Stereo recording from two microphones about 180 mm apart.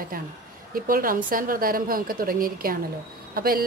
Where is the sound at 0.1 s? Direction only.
50° right (ahead or behind).